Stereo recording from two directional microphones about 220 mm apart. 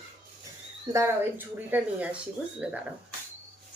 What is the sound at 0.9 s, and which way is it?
A woman's voice, 10° right (ahead or behind).